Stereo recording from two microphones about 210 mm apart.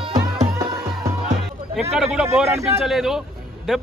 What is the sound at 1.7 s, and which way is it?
A man's voice, centre (ahead or behind).